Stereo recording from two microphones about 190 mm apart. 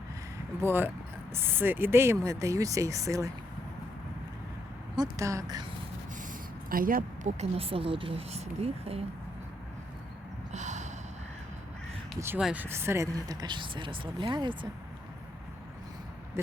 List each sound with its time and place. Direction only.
0.6 s speech: 10° right (ahead or behind)
4.9 s speech: 15° right (ahead or behind)
6.7 s speech: 50° right (ahead or behind); by 9.0 s 30° right (ahead or behind)
10.5 s snort: 40° right (ahead or behind)
12.2 s speech: 5° right (ahead or behind); by 14.7 s 25° right (ahead or behind)